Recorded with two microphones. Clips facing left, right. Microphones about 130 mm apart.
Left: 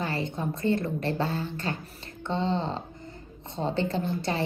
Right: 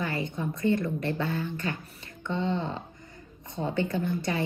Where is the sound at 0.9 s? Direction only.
25° left (ahead or behind).